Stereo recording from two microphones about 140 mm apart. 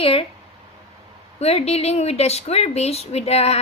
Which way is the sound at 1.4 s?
50° left (ahead or behind).